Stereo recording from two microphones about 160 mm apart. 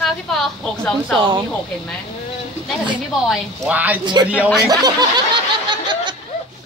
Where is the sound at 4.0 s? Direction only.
25° right (ahead or behind).